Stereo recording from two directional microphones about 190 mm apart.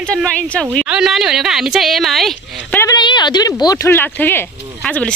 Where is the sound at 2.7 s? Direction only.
15° left (ahead or behind).